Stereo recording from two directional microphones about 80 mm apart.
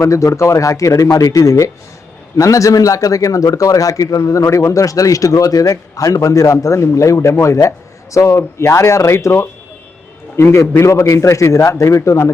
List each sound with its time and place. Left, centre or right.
0.0 s a man's voice: left
10.3 s a man's voice: left